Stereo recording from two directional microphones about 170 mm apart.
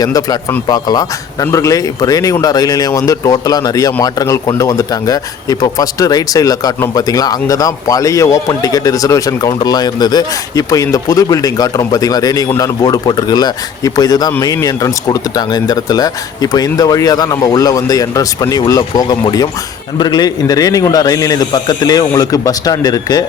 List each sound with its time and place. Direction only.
0.0 s speech: 20° left (ahead or behind)